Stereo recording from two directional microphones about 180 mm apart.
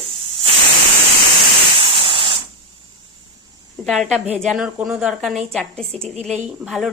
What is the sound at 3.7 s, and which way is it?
A woman's voice, centre (ahead or behind).